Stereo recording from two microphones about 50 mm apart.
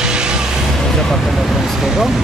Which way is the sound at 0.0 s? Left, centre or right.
Centre.